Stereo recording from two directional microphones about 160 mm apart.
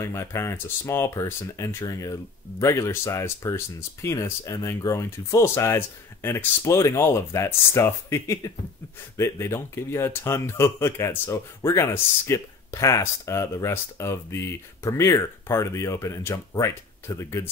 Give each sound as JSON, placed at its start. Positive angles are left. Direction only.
{"t": 0.0, "sound": "speech", "side_deg": 20}